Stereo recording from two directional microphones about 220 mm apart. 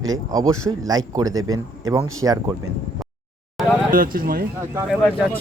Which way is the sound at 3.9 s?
40° right (ahead or behind).